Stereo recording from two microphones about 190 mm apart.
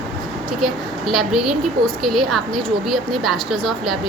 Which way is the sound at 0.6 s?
Centre (ahead or behind).